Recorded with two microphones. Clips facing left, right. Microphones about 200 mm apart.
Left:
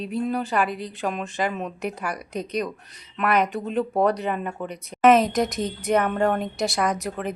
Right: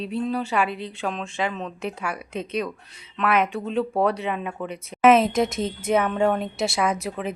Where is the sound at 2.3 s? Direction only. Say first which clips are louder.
Left 1 dB; 40° left (ahead or behind).